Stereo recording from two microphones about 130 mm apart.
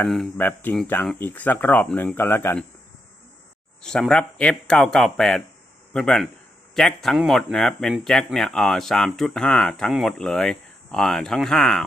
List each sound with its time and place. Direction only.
0.3 s speech: 15° left (ahead or behind)
3.8 s speech: 5° left (ahead or behind)